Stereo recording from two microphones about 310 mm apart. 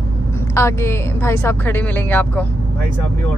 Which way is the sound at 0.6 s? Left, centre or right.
Centre.